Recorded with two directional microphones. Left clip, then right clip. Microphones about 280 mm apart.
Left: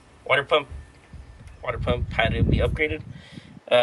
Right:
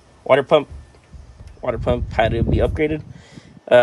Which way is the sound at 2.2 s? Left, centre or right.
Right.